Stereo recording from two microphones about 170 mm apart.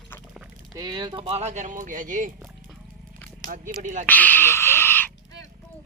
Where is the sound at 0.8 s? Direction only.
25° right (ahead or behind); by 2.3 s 50° right (ahead or behind).